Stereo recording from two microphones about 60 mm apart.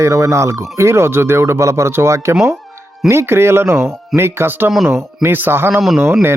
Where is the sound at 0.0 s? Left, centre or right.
Right.